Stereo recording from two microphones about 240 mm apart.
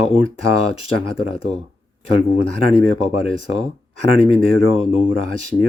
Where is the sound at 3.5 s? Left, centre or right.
Left.